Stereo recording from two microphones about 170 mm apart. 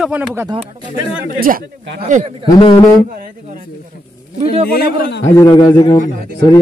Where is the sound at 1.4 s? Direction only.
55° right (ahead or behind).